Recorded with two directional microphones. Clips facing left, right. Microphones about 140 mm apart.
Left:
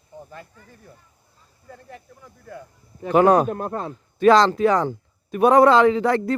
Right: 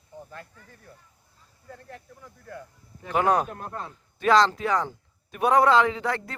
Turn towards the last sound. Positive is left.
turn(degrees=35)  # may be behind; listen again after turning